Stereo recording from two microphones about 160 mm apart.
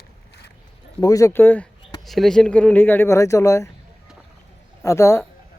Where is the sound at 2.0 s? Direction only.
Centre (ahead or behind); by 3.7 s 20° left (ahead or behind).